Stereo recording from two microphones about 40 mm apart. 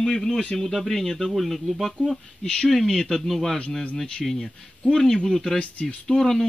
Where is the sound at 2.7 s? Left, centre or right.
Centre.